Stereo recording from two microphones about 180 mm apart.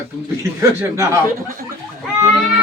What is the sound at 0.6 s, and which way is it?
Speech, 15° right (ahead or behind).